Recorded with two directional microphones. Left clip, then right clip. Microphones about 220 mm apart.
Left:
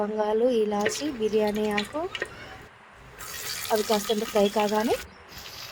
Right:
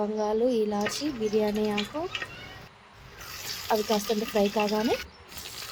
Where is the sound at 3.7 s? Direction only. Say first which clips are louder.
Left 1 dB; 15° left (ahead or behind).